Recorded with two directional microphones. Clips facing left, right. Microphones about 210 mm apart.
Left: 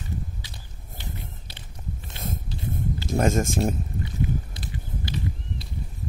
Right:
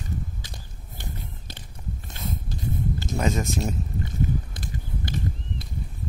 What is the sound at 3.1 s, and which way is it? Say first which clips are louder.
Speech: left 4 dB; 50° left (ahead or behind).